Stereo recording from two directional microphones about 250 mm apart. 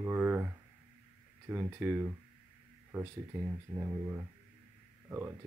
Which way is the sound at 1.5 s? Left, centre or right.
Centre.